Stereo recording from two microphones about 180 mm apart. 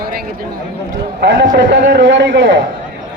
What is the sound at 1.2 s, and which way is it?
A man's voice, 80° right.